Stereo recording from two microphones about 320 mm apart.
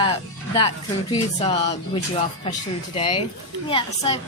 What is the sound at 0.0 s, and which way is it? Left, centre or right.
A woman's voice, centre.